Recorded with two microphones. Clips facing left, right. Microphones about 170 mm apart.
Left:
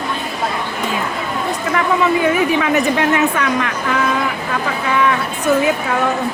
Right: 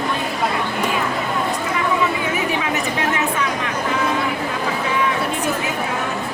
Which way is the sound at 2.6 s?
65° left (ahead or behind).